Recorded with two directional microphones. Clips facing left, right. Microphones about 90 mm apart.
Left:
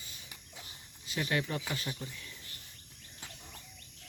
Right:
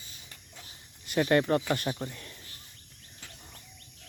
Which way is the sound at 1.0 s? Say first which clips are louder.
Right 9 dB; 55° right (ahead or behind).